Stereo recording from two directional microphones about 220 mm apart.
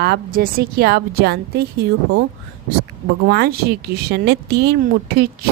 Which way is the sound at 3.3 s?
45° right (ahead or behind).